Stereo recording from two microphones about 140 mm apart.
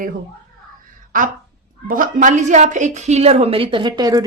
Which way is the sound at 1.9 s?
75° right (ahead or behind).